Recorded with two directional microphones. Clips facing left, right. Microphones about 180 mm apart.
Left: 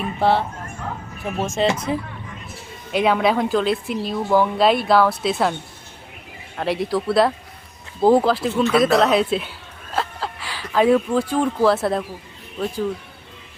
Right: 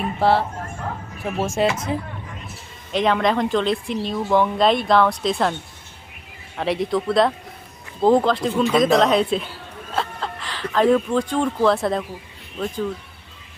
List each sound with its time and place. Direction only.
0.2 s speech: 5° right (ahead or behind)
2.9 s speech: 5° left (ahead or behind)
6.6 s speech: centre (ahead or behind)